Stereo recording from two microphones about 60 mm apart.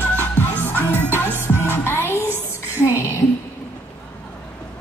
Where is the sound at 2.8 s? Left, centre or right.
Left.